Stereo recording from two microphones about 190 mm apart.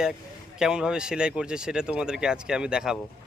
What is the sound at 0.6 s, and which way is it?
Speech, 5° right (ahead or behind).